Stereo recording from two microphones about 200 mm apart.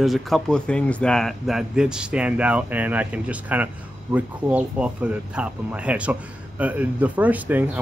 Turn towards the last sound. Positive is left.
turn(degrees=-10)  # may be behind; listen again after turning